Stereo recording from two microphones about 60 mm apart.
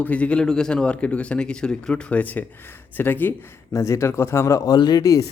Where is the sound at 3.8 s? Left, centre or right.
Left.